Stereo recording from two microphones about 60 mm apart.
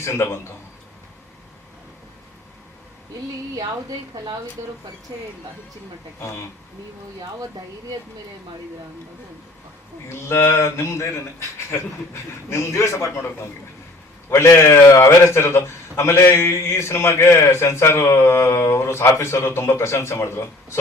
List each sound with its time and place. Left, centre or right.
0.0 s a man's voice: left
3.5 s a woman's voice: right
6.1 s a man's voice: left
10.1 s a man's voice: left